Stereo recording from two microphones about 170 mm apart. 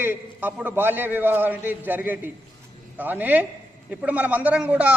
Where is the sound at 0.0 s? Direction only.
10° right (ahead or behind).